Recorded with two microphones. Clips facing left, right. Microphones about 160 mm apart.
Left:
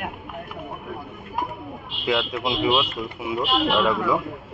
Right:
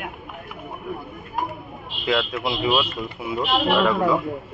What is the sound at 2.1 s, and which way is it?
Speech, 15° left (ahead or behind).